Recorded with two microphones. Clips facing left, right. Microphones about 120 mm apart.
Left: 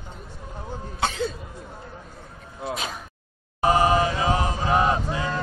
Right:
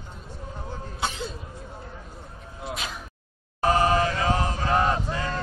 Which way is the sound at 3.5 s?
15° left (ahead or behind).